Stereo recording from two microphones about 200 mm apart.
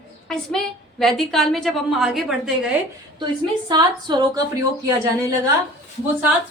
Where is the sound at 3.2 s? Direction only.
20° right (ahead or behind).